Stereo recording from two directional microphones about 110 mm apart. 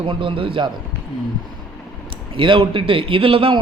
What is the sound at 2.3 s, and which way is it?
A man's voice, 50° right (ahead or behind).